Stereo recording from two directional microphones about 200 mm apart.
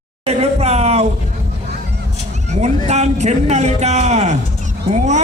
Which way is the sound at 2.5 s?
35° right (ahead or behind).